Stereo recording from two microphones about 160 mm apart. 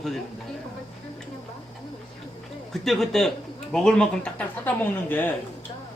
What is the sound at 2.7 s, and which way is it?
A man's voice, centre (ahead or behind).